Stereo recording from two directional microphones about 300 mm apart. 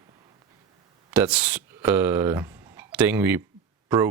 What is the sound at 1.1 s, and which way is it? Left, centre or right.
Speech, centre.